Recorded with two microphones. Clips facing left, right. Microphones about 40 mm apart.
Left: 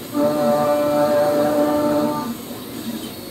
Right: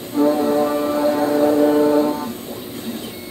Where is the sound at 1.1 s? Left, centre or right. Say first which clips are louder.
Right 1 dB; right.